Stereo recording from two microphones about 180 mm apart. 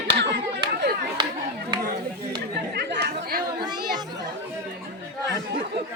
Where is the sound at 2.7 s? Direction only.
70° right (ahead or behind).